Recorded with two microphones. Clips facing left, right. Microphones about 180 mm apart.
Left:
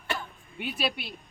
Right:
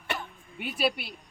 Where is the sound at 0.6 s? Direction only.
5° right (ahead or behind).